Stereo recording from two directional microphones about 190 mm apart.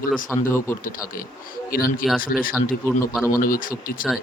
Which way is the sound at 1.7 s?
50° left (ahead or behind).